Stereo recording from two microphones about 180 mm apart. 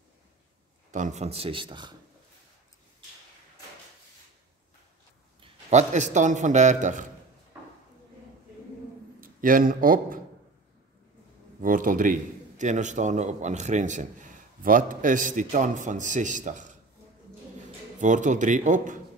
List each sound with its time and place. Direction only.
0.9 s a man's voice: 40° right (ahead or behind); by 2.0 s 25° right (ahead or behind)
5.4 s a man's voice: 40° right (ahead or behind)
7.5 s a sound: 5° right (ahead or behind)
9.2 s speech: 50° right (ahead or behind)
11.6 s a man's voice: 50° right (ahead or behind)
18.0 s a man's voice: 45° right (ahead or behind)